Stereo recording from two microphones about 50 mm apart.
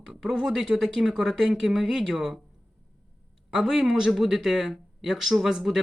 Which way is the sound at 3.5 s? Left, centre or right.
Centre.